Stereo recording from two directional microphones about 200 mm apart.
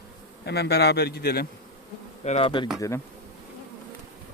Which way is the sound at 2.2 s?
30° left (ahead or behind).